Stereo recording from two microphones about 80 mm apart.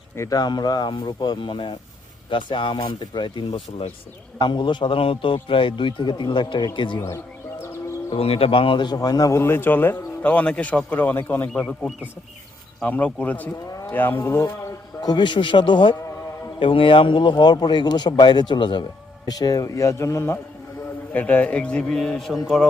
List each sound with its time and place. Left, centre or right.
0.3 s speech: left
2.8 s a man's voice: left
6.7 s speech: left
8.1 s speech: left
9.0 s a man's voice: left
9.4 s speech: left
11.4 s a man's voice: centre
13.7 s roaring cats: left
13.9 s speech: left
15.0 s a man's voice: left
19.2 s a man's voice: left
21.1 s a man's voice: left; by 22.7 s centre